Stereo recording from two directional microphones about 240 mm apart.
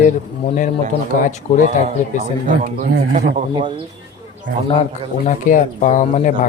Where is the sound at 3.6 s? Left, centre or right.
Right.